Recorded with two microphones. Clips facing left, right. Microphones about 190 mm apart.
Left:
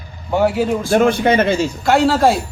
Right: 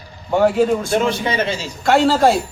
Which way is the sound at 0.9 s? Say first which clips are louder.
Left 5 dB; 55° left (ahead or behind).